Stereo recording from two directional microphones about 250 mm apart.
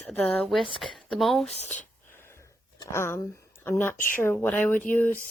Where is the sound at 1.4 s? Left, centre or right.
Left.